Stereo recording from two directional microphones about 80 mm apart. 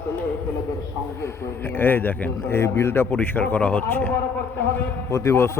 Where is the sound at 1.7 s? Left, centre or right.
Left.